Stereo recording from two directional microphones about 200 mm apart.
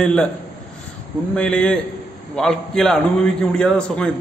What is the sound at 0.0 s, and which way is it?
Speech, 5° left (ahead or behind).